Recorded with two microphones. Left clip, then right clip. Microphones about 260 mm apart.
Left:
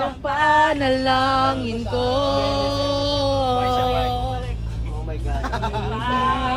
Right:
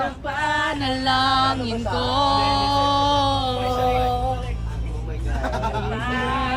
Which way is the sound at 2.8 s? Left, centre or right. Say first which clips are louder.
Right 3 dB; left.